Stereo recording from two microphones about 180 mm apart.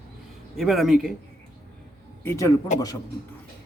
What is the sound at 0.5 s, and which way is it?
Speech, centre (ahead or behind).